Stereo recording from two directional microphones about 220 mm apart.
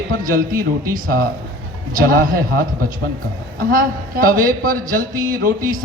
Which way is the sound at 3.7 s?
40° right (ahead or behind).